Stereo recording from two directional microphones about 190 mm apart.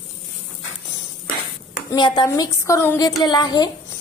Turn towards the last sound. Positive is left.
turn(degrees=20)  # may be behind; listen again after turning